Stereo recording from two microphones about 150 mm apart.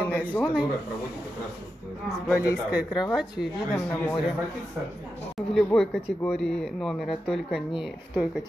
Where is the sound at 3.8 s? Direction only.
10° left (ahead or behind).